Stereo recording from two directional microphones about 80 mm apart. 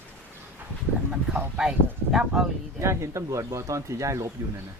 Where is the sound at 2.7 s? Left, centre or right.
Right.